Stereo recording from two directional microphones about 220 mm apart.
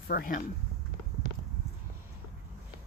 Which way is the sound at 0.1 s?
40° left (ahead or behind).